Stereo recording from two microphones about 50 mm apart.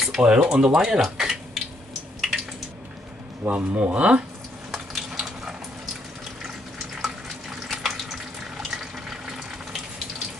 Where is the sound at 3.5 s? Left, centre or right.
Right.